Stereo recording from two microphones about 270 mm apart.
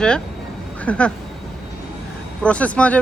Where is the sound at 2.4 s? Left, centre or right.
Centre.